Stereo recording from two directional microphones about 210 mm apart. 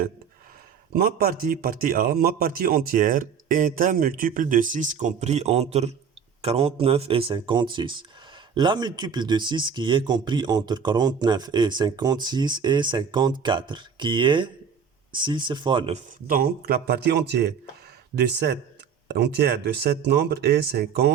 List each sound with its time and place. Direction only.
0.9 s a man's voice: 45° right (ahead or behind); by 16.0 s 25° right (ahead or behind)
16.2 s speech: 45° right (ahead or behind)